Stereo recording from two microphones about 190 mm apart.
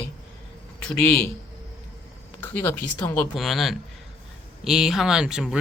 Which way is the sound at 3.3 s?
Centre (ahead or behind).